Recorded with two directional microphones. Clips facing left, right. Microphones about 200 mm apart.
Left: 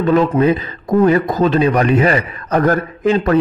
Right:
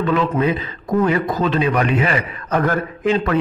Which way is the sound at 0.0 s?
40° left (ahead or behind).